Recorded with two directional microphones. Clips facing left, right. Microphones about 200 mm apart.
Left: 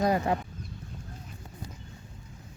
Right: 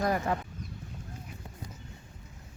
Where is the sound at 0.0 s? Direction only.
20° left (ahead or behind).